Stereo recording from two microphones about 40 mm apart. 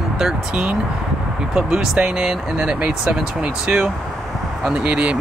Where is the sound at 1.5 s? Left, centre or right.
Centre.